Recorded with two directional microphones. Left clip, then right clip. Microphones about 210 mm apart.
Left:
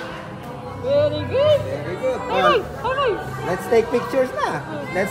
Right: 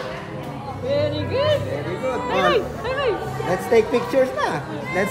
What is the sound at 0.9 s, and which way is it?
Speech, 45° right (ahead or behind).